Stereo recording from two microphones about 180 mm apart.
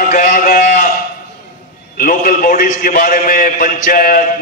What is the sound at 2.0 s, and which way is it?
A man's voice, 50° left (ahead or behind).